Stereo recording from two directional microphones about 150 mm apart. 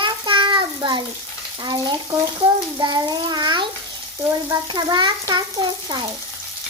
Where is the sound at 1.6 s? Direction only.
30° right (ahead or behind).